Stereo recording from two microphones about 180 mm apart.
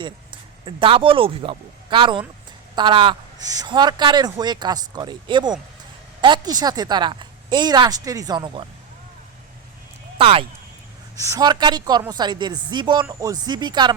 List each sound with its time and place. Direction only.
0.0 s speech: 30° right (ahead or behind)
10.2 s speech: 30° right (ahead or behind)
11.2 s speech: 20° right (ahead or behind)